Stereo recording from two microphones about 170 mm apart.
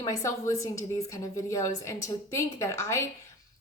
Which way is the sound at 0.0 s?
20° left (ahead or behind).